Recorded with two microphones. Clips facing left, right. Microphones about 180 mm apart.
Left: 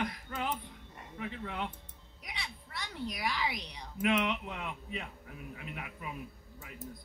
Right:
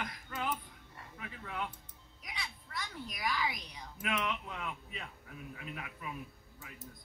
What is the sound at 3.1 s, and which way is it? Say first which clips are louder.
Speech: right 1 dB; 30° left (ahead or behind).